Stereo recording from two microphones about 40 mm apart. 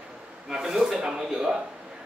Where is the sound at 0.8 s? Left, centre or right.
Centre.